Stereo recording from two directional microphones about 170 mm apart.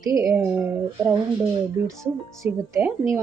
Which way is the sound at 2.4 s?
15° right (ahead or behind).